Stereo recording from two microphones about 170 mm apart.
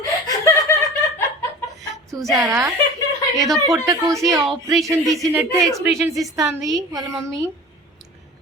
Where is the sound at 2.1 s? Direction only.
20° right (ahead or behind).